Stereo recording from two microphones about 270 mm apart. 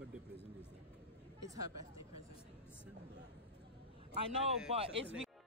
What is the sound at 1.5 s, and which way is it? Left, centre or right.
Speech, centre.